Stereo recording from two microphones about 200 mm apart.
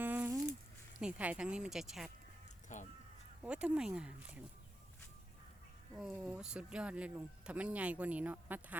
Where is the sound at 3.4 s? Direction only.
5° right (ahead or behind).